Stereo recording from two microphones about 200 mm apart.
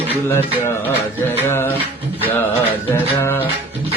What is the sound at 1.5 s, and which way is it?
Speech, 10° left (ahead or behind).